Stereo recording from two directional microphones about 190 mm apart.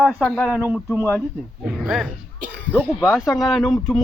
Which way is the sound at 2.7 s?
5° right (ahead or behind).